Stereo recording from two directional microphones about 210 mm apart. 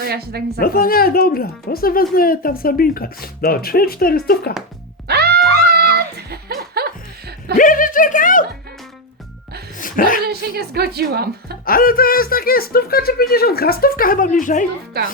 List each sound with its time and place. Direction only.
0.0 s a woman's voice: 50° right (ahead or behind)
0.6 s speech: 45° left (ahead or behind)
5.0 s music: 50° right (ahead or behind)
7.5 s speech: 40° left (ahead or behind)
9.7 s a sound: 40° left (ahead or behind)
10.2 s a woman's voice: 50° right (ahead or behind)
11.6 s speech: 45° left (ahead or behind)